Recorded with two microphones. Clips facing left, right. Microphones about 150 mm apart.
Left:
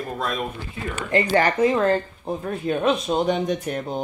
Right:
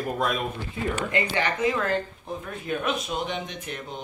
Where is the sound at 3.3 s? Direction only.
40° left (ahead or behind).